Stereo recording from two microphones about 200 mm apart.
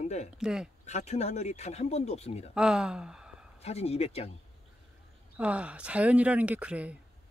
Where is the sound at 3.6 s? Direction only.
30° left (ahead or behind).